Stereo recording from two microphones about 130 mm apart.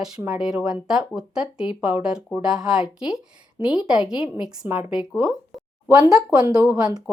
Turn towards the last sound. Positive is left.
turn(degrees=-30)  # may be behind; listen again after turning